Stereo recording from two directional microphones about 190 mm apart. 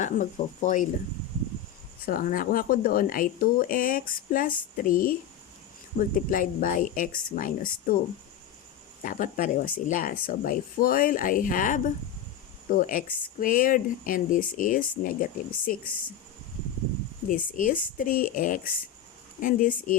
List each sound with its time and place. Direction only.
0.0 s speech: 40° left (ahead or behind)
2.0 s speech: 45° left (ahead or behind)
9.0 s speech: 45° left (ahead or behind)
17.2 s speech: 45° left (ahead or behind)